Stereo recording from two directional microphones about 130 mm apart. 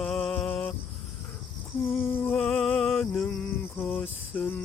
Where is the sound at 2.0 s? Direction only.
15° left (ahead or behind).